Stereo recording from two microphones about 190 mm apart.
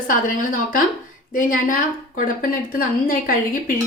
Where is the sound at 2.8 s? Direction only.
45° left (ahead or behind).